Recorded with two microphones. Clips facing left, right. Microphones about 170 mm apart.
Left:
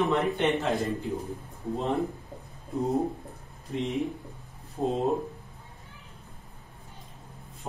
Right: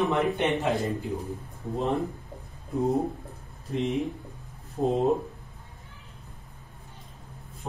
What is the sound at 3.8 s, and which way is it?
Speech, centre (ahead or behind).